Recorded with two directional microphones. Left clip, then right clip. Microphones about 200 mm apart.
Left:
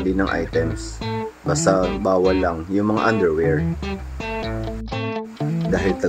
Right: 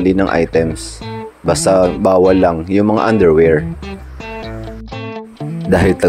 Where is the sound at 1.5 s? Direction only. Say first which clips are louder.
Right 8 dB; 35° right (ahead or behind).